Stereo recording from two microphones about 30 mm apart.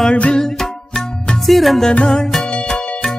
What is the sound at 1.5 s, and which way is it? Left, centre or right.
Music, centre.